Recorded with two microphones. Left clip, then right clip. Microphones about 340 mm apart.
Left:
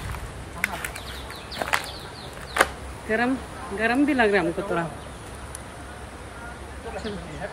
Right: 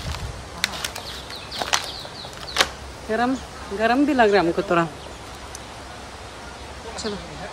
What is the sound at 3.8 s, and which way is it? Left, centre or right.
Speech, centre.